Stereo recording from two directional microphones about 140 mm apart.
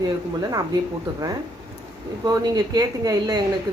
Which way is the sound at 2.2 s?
25° right (ahead or behind).